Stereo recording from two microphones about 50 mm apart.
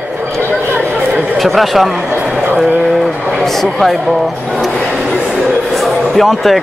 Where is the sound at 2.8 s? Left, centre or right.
Centre.